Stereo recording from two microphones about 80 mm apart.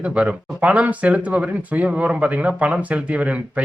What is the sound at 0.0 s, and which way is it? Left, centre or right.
Speech, centre.